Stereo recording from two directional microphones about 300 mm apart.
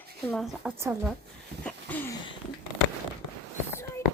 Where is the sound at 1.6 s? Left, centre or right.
Centre.